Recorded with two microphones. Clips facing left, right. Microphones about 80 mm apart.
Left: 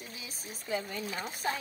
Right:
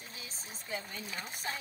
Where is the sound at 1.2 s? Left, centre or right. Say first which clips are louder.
Left 7 dB; left.